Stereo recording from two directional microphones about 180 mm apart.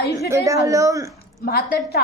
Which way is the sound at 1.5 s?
60° left (ahead or behind).